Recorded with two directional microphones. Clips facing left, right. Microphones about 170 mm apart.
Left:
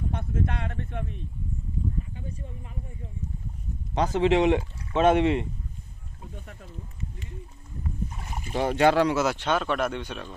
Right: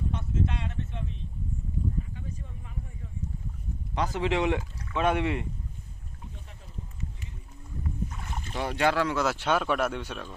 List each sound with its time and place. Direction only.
0.1 s a sound: 55° left (ahead or behind)
3.9 s speech: 25° left (ahead or behind)
8.5 s speech: 25° left (ahead or behind)
9.1 s speech: centre (ahead or behind)